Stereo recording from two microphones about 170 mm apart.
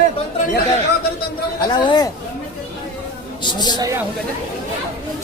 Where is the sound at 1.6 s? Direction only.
25° left (ahead or behind).